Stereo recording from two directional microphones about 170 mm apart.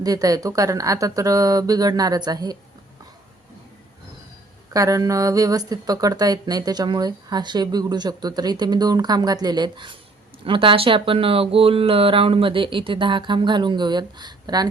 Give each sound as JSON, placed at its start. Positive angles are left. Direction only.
{"t": 0.0, "sound": "speech", "side_deg": -20}
{"t": 4.7, "sound": "speech", "side_deg": -20}